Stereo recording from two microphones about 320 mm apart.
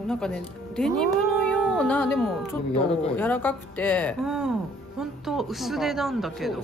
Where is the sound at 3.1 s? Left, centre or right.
Centre.